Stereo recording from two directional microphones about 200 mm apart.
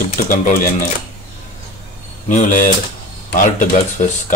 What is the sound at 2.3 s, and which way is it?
Speech, 40° left (ahead or behind).